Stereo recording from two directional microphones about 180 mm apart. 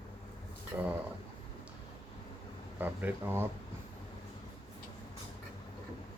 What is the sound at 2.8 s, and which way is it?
Speech, 10° right (ahead or behind).